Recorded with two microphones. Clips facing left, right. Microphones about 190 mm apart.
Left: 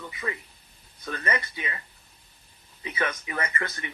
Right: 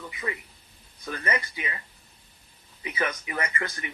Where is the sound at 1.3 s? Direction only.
25° left (ahead or behind).